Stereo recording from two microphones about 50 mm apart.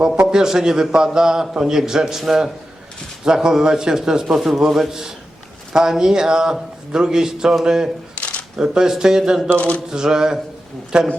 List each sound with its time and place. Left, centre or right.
0.2 s a man's voice: centre
8.1 s shuffling cards: left
8.5 s a man's voice: centre
9.6 s a sound: left
9.9 s a man's voice: centre